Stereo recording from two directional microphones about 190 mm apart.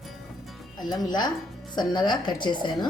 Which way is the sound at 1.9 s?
25° left (ahead or behind).